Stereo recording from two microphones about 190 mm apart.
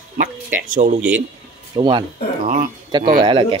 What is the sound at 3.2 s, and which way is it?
Speech, 25° right (ahead or behind).